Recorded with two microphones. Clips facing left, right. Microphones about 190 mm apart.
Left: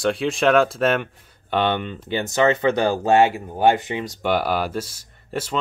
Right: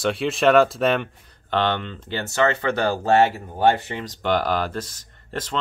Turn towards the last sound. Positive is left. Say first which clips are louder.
# left 3 dB
turn(degrees=10)  # may be behind; listen again after turning